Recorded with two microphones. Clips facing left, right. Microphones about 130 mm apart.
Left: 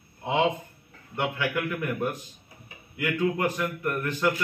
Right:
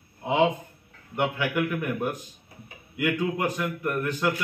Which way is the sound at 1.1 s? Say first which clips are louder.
Right 2 dB; 15° right (ahead or behind).